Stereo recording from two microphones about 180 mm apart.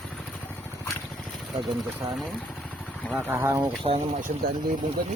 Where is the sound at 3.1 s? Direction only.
10° right (ahead or behind).